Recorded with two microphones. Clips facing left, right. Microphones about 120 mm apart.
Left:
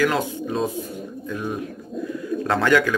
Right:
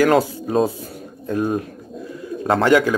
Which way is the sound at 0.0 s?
40° right (ahead or behind).